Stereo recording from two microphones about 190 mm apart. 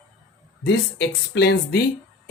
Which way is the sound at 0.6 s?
65° left (ahead or behind).